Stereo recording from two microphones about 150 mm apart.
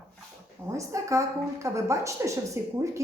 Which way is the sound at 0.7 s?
20° right (ahead or behind).